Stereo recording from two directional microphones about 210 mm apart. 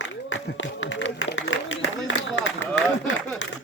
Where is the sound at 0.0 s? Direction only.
65° left (ahead or behind).